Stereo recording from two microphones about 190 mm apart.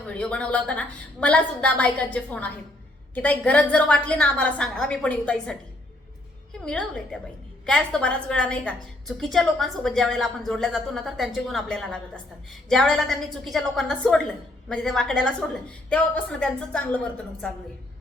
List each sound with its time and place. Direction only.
0.1 s a woman's voice: 5° left (ahead or behind)